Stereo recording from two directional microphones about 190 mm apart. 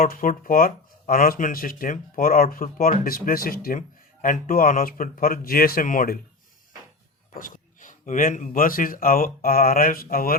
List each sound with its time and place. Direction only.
0.0 s speech: 45° left (ahead or behind)
7.3 s speech: 45° left (ahead or behind)